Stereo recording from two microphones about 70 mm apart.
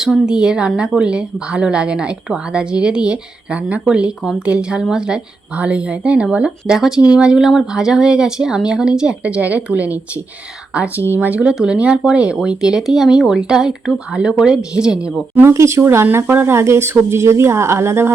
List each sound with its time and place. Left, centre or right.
0.0 s a woman's voice: centre
11.1 s speech: right
11.5 s a woman's voice: centre
15.5 s speech: right